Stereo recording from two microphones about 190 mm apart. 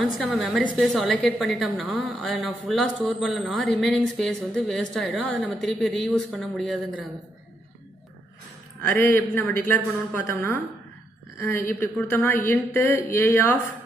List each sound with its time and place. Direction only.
0.2 s a woman's voice: centre (ahead or behind)
8.8 s a man's voice: 10° left (ahead or behind)
11.8 s a man's voice: 10° left (ahead or behind)